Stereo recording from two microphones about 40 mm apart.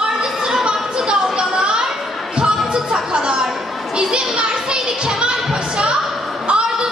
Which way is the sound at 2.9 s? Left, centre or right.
Right.